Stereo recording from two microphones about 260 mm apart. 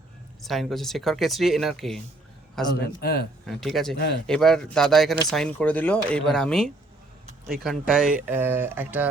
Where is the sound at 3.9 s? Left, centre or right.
Left.